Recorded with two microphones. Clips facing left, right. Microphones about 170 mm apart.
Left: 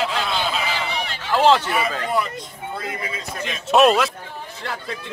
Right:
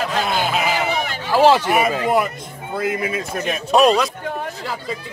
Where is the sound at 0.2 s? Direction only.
45° right (ahead or behind).